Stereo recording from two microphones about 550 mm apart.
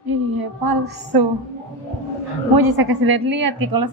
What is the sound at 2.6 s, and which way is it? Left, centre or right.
A woman's voice, right.